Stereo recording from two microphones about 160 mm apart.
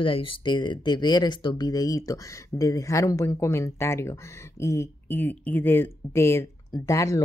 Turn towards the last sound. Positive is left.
turn(degrees=20)  # may be behind; listen again after turning